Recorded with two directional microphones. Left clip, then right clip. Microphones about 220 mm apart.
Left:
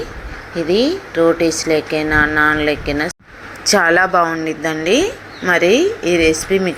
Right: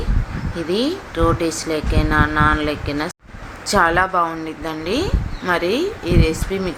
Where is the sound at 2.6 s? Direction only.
35° right (ahead or behind).